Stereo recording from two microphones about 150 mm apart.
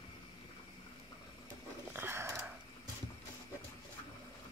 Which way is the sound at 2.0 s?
15° right (ahead or behind).